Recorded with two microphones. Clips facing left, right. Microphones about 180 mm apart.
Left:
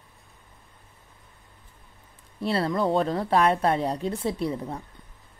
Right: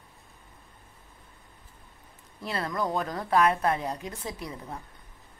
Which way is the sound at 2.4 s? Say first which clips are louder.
Left 6 dB; 30° left (ahead or behind).